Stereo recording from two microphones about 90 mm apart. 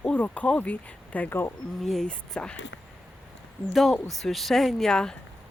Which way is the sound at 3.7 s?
Centre (ahead or behind).